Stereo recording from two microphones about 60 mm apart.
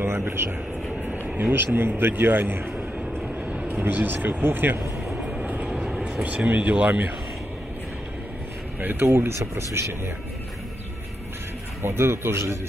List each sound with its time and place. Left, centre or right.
0.0 s a man's voice: right
5.4 s vehicle: right
6.2 s speech: right
9.0 s speech: right
11.8 s speech: right